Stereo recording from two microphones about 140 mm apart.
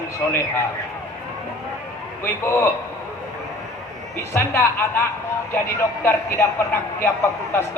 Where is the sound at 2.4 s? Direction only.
20° left (ahead or behind).